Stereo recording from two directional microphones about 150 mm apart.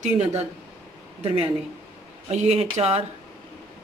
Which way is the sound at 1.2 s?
40° right (ahead or behind).